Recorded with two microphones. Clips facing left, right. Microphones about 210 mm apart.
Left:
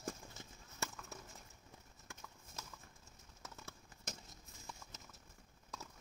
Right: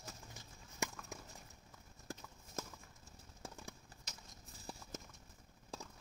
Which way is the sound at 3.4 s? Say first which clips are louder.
Right 4 dB; 30° right (ahead or behind).